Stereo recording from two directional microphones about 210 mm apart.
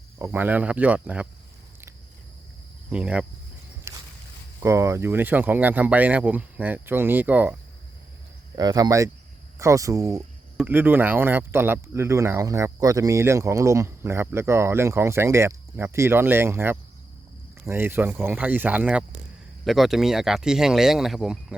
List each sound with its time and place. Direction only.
0.2 s speech: 10° right (ahead or behind)
2.9 s speech: 5° right (ahead or behind)
3.9 s a sound: 15° right (ahead or behind)
4.6 s speech: 15° right (ahead or behind)
8.5 s speech: 15° right (ahead or behind)